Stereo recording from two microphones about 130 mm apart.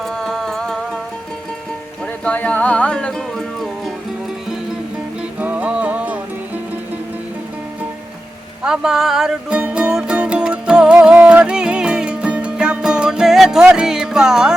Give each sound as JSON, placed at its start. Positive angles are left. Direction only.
{"t": 0.0, "sound": "music", "side_deg": 5}
{"t": 2.2, "sound": "music", "side_deg": 10}
{"t": 5.4, "sound": "music", "side_deg": -10}
{"t": 8.6, "sound": "music", "side_deg": -5}